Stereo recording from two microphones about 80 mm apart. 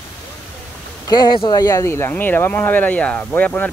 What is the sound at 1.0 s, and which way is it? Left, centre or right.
Speech, left.